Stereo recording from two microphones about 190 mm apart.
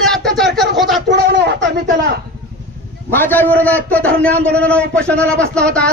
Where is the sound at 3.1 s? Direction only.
10° left (ahead or behind).